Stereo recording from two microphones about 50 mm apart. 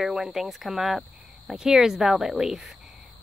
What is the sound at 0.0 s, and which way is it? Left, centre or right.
Speech, centre.